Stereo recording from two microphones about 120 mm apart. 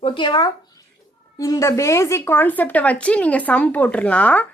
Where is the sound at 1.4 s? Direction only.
30° left (ahead or behind).